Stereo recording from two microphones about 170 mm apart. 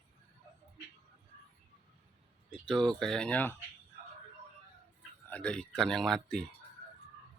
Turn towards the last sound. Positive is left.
turn(degrees=5)  # may be behind; listen again after turning